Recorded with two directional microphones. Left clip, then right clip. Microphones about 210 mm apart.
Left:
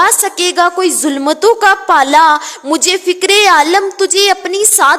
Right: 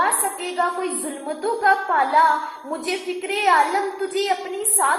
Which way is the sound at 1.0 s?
50° left (ahead or behind).